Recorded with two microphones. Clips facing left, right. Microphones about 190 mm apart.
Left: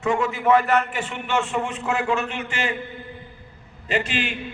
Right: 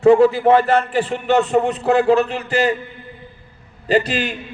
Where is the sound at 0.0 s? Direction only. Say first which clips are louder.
Right 11 dB; 35° right (ahead or behind).